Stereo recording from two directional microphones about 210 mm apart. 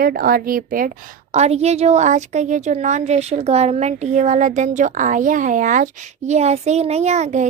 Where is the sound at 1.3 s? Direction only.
30° right (ahead or behind).